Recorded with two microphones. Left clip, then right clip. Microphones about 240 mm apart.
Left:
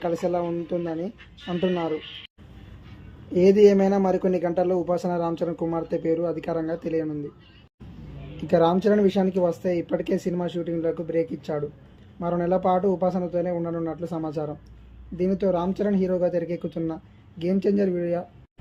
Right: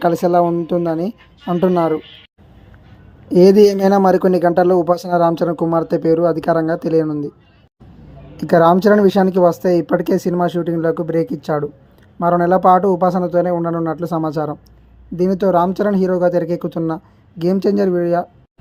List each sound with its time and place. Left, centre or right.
0.0 s speech: right
3.2 s speech: right
8.4 s speech: right